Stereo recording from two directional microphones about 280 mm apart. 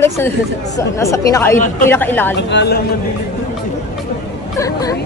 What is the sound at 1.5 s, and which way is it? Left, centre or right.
Speech, left.